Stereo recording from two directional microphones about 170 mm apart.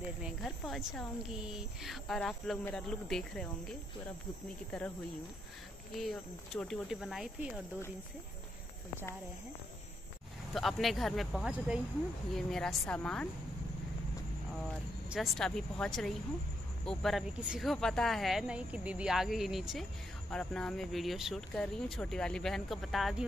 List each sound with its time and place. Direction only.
0.2 s speech: centre (ahead or behind)
5.9 s speech: centre (ahead or behind)
10.5 s speech: centre (ahead or behind)
15.0 s speech: centre (ahead or behind)